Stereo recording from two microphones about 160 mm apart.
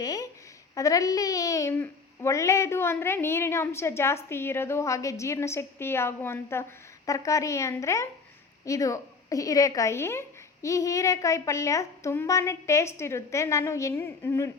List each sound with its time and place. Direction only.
0.0 s a woman's voice: 25° left (ahead or behind)